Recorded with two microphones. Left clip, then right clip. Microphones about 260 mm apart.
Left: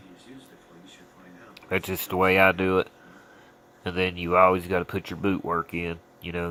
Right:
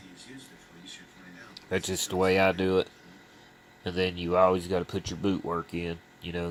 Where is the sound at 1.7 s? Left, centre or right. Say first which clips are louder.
Left 2 dB; centre.